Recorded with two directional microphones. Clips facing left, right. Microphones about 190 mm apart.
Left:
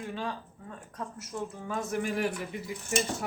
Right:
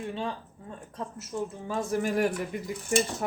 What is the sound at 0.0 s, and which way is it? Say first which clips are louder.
Speech: right 2 dB; 30° right (ahead or behind).